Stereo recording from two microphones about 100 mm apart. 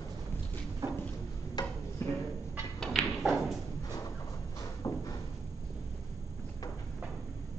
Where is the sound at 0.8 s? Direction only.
30° right (ahead or behind).